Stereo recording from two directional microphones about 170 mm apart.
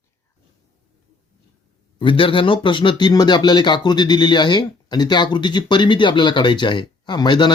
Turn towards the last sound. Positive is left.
turn(degrees=25)  # may be behind; listen again after turning